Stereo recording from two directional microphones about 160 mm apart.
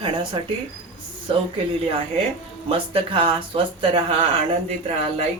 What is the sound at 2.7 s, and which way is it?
Speech, 35° right (ahead or behind).